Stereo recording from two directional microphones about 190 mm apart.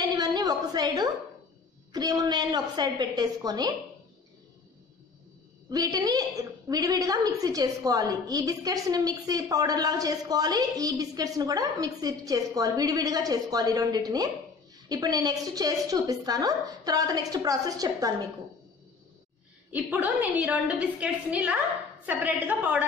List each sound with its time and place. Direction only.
0.2 s a sound: 20° right (ahead or behind)
1.9 s a woman's voice: 20° right (ahead or behind)
5.7 s a woman's voice: 20° right (ahead or behind)
19.7 s a woman's voice: 10° right (ahead or behind)